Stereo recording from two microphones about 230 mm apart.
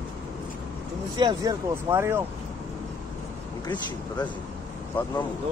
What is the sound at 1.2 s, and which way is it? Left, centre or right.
Speech, centre.